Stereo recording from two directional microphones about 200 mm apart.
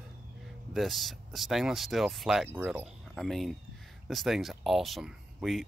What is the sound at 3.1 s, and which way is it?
Speech, centre (ahead or behind).